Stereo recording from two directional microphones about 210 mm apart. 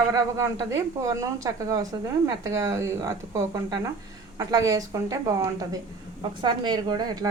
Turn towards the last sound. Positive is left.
turn(degrees=-20)  # may be behind; listen again after turning